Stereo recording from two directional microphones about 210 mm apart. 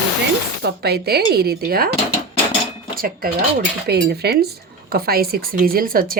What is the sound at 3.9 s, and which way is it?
A woman's voice, 50° right (ahead or behind).